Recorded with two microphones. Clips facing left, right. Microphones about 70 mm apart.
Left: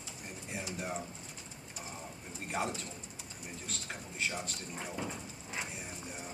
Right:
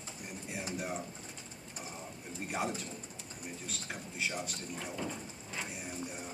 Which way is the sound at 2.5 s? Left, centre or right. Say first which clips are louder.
Even; centre.